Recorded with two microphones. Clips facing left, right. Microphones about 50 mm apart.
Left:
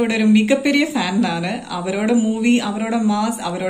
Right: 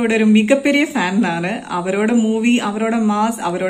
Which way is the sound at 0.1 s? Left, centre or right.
Right.